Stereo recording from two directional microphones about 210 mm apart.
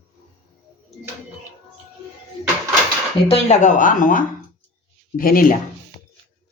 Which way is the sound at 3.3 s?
30° left (ahead or behind).